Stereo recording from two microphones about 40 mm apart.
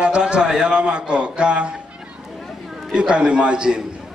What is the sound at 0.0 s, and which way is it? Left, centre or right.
A man's voice, right.